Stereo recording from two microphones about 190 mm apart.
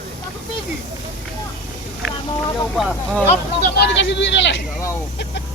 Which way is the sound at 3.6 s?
65° left (ahead or behind).